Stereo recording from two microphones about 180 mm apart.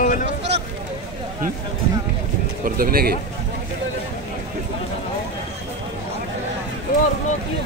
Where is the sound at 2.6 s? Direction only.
55° right (ahead or behind).